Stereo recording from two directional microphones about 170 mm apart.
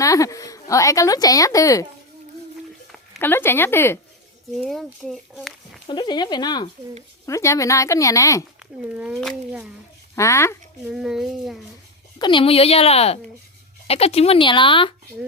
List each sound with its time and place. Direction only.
0.0 s a woman's voice: 20° left (ahead or behind)
3.2 s speech: 15° left (ahead or behind)
4.5 s a child's voice: centre (ahead or behind)
5.9 s a woman's voice: 25° left (ahead or behind)
8.5 s a child's voice: 5° right (ahead or behind)
10.2 s speech: 15° left (ahead or behind)
10.8 s a child's voice: 5° right (ahead or behind)
12.2 s speech: 30° left (ahead or behind)